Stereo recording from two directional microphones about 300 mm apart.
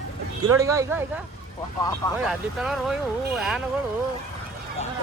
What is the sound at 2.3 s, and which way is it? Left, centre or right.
Speech, centre.